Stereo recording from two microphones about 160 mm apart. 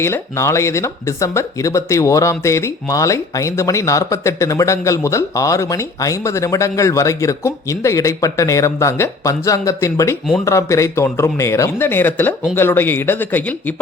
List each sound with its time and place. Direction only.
0.0 s a man's voice: 15° left (ahead or behind)